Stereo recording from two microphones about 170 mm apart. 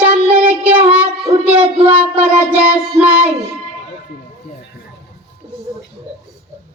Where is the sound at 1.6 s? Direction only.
35° right (ahead or behind).